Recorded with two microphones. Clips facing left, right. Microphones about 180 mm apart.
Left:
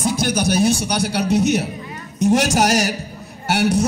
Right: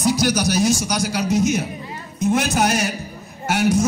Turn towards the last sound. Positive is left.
turn(degrees=70)  # may be behind; listen again after turning